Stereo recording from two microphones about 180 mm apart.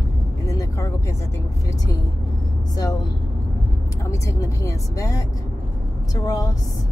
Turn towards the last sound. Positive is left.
turn(degrees=20)  # may be behind; listen again after turning